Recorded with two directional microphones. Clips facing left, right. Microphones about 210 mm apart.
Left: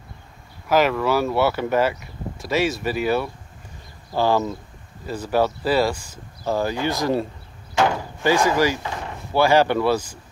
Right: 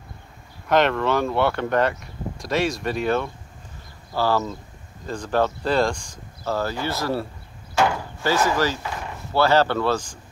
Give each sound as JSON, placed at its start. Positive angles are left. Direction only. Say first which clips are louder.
{"t": 0.7, "sound": "speech", "louder": "left 1 dB", "side_deg": 5}
{"t": 4.1, "sound": "speech", "louder": "left 2 dB", "side_deg": 15}
{"t": 7.7, "sound": "door", "louder": "left 1 dB", "side_deg": 15}
{"t": 9.3, "sound": "speech", "louder": "left 2 dB", "side_deg": 10}